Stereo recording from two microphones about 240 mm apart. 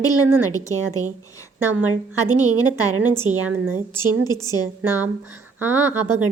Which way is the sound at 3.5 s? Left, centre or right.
Centre.